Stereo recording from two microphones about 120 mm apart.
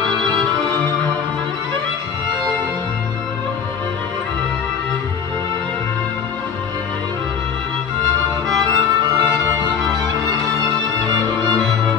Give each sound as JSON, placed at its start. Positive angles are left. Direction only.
{"t": 8.7, "sound": "music", "side_deg": -35}